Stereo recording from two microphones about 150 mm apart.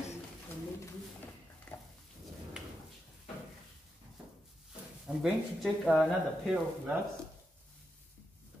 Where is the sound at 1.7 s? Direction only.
10° left (ahead or behind).